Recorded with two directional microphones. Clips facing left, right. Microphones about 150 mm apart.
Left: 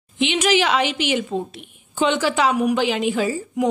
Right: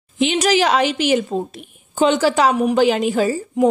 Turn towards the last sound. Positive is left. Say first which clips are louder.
# right 4 dB
turn(degrees=-40)  # may be behind; listen again after turning